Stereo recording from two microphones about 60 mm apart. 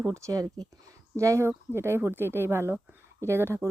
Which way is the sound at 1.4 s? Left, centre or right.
Right.